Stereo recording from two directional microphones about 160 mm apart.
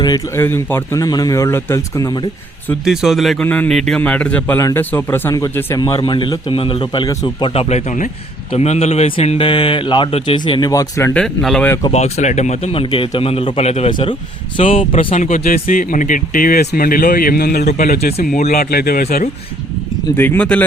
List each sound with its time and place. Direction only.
0.3 s a man's voice: 15° left (ahead or behind)
2.8 s a man's voice: 5° right (ahead or behind); by 11.1 s 20° left (ahead or behind)
11.1 s speech: 5° left (ahead or behind)
11.9 s a man's voice: 45° left (ahead or behind); by 17.7 s 75° left (ahead or behind)
17.7 s speech: 60° left (ahead or behind)
18.5 s speech: 70° left (ahead or behind)
20.1 s speech: 10° left (ahead or behind)